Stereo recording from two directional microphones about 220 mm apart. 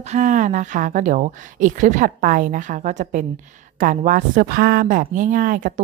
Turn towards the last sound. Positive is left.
turn(degrees=-40)  # may be behind; listen again after turning